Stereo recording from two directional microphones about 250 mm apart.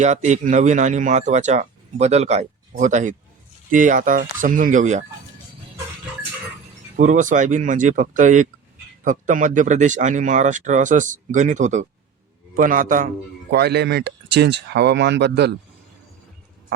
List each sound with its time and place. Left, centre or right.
0.0 s speech: right
6.9 s speech: right